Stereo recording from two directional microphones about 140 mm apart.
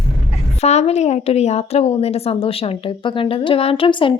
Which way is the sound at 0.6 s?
50° left (ahead or behind).